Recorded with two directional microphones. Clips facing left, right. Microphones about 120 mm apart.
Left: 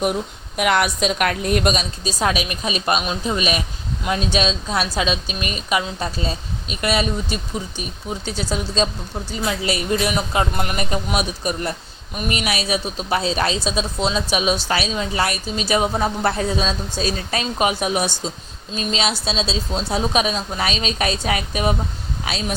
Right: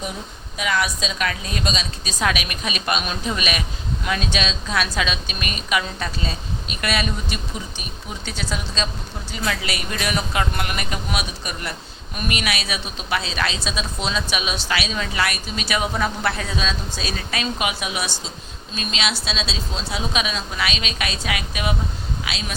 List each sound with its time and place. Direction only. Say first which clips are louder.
0.0 s a woman's voice: left 9 dB; 60° left (ahead or behind)
2.0 s a woman's voice: left 2 dB; 35° left (ahead or behind)
9.5 s a woman's voice: left 6 dB; 25° left (ahead or behind); by 18.1 s 40° left (ahead or behind)
18.7 s a woman's voice: left 4 dB; 30° left (ahead or behind)